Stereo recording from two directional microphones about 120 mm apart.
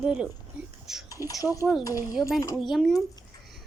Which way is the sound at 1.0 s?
30° left (ahead or behind).